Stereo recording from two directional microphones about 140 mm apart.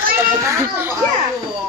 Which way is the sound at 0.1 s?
20° right (ahead or behind).